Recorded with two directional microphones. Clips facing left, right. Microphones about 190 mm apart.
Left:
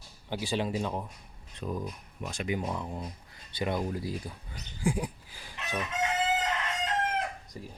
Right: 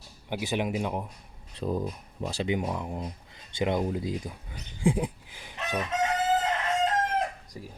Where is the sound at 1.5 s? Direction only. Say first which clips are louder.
Right 5 dB; 30° right (ahead or behind).